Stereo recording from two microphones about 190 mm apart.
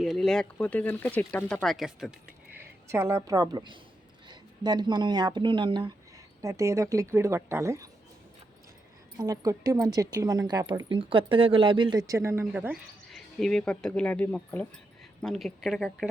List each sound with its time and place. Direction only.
0.0 s a woman's voice: centre (ahead or behind); by 7.9 s 15° right (ahead or behind)
9.1 s a woman's voice: 20° right (ahead or behind)
13.1 s speech: centre (ahead or behind)